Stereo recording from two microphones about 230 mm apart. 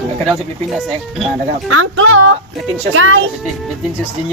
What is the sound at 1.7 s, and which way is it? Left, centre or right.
Speech, right.